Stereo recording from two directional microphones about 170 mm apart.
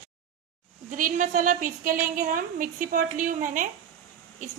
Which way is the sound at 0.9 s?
50° right (ahead or behind).